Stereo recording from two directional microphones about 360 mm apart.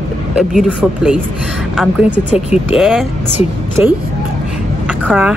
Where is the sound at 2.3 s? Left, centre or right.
Centre.